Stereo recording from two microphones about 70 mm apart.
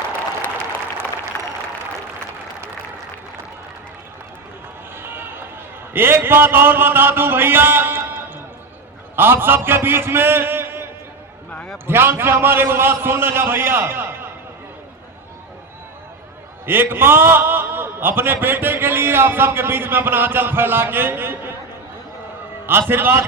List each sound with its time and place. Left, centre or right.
1.3 s a sound: left
4.9 s run: right
5.9 s a man's voice: right
11.9 s a man's voice: right
16.6 s a man's voice: right
22.9 s a man's voice: right